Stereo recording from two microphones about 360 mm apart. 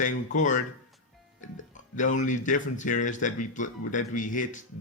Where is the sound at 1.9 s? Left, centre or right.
Left.